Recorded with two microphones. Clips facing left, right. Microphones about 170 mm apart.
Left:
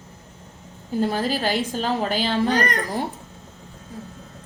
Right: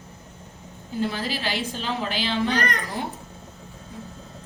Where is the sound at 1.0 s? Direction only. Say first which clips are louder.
Left 5 dB; 45° left (ahead or behind).